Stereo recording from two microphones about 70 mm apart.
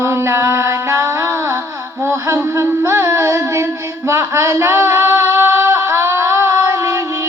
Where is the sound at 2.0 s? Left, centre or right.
Right.